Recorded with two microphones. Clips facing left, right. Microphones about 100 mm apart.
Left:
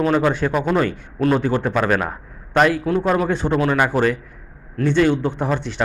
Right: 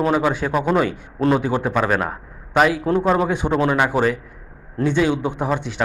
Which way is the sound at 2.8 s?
20° right (ahead or behind).